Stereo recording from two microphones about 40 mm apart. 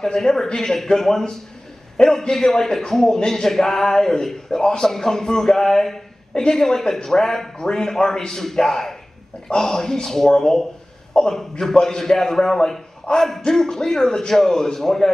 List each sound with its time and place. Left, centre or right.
0.0 s a man's voice: centre
13.1 s speech: left
13.5 s a man's voice: centre